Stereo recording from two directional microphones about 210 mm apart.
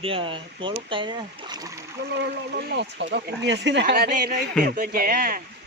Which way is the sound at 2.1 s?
50° right (ahead or behind).